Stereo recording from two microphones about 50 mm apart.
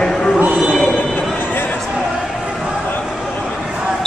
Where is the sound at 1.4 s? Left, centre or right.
Left.